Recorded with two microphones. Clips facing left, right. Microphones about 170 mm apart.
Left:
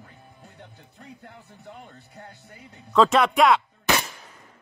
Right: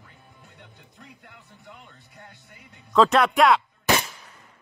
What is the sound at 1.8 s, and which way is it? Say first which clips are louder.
Speech: left 5 dB; 40° left (ahead or behind).